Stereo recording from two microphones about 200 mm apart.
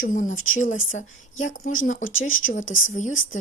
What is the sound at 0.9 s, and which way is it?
Speech, 40° left (ahead or behind).